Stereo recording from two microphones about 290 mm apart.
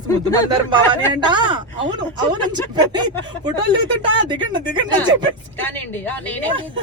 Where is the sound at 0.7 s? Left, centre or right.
Centre.